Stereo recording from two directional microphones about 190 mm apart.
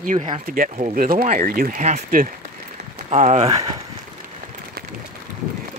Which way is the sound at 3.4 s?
20° right (ahead or behind).